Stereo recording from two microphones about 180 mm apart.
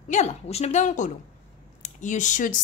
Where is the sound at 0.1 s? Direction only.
40° left (ahead or behind).